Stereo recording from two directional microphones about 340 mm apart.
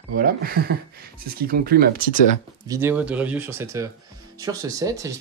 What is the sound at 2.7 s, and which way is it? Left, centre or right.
Speech, centre.